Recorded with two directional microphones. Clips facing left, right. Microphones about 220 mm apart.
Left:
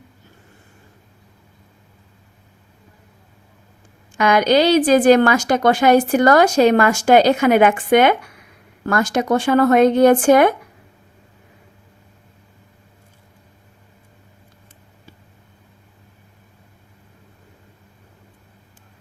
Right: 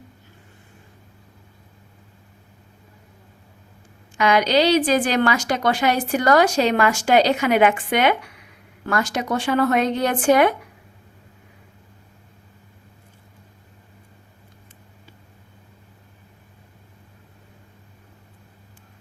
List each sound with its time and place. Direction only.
4.2 s a woman's voice: 50° left (ahead or behind)